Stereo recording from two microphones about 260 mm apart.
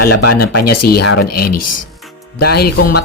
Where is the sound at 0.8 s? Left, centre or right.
Left.